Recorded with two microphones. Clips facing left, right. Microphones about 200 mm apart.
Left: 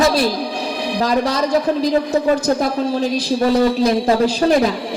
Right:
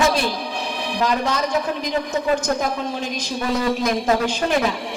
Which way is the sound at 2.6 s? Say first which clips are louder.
Left 6 dB; 35° left (ahead or behind).